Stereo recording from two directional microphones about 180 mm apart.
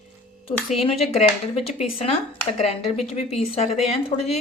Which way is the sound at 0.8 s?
35° left (ahead or behind).